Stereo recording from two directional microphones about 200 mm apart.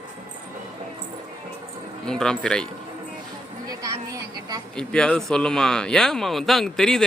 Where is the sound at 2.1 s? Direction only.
5° left (ahead or behind).